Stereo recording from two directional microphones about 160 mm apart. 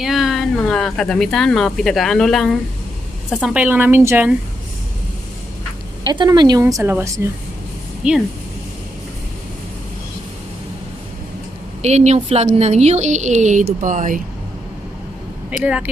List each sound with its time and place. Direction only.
0.0 s a woman's voice: centre (ahead or behind)
6.0 s speech: 25° right (ahead or behind)
6.6 s a woman's voice: 15° right (ahead or behind)
11.8 s a woman's voice: 45° right (ahead or behind)
15.5 s a woman's voice: 5° right (ahead or behind)